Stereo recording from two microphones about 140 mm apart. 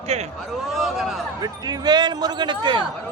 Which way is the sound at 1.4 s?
30° right (ahead or behind).